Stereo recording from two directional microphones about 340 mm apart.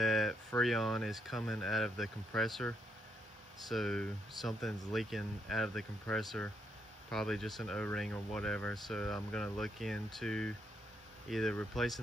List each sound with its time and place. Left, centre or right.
0.0 s speech: centre